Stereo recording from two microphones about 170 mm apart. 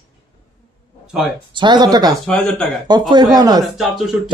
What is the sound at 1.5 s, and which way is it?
Speech, 25° right (ahead or behind).